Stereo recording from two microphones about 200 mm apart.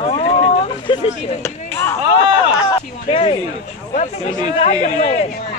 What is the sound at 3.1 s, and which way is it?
A man's voice, 25° left (ahead or behind).